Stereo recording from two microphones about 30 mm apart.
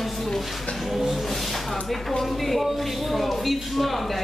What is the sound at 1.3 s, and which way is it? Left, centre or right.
Speech, centre.